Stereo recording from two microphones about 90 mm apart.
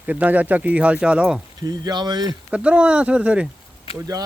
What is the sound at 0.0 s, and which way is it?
Speech, 15° right (ahead or behind).